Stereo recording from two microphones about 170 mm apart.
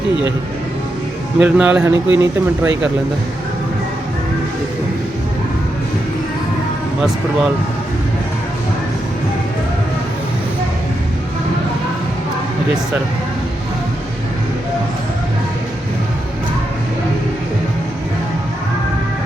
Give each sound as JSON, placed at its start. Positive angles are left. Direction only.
{"t": 1.4, "sound": "speech", "side_deg": -10}